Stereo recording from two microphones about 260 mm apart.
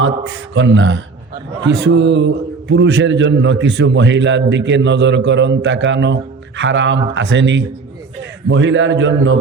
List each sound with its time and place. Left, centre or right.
0.0 s a man's voice: right